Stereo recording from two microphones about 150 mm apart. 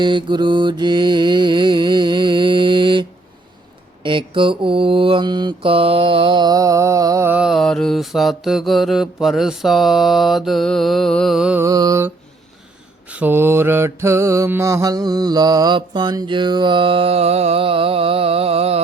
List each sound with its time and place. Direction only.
0.0 s mantra: 30° right (ahead or behind)
7.3 s mantra: 5° right (ahead or behind)
11.6 s mantra: 20° right (ahead or behind); by 18.8 s 40° right (ahead or behind)